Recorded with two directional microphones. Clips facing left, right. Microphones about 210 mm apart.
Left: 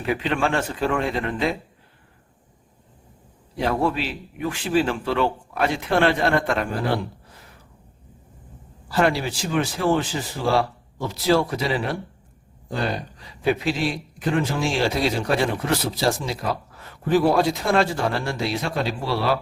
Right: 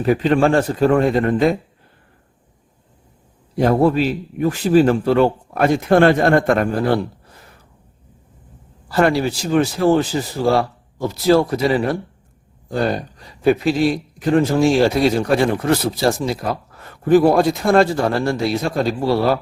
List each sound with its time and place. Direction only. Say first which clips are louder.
0.0 s speech: right 8 dB; 40° right (ahead or behind)
3.6 s speech: right 8 dB; 45° right (ahead or behind)
8.9 s speech: right 5 dB; 45° right (ahead or behind)
12.9 s speech: right 6 dB; 45° right (ahead or behind)